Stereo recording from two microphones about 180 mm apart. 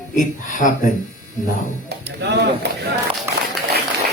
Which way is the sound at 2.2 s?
70° right (ahead or behind).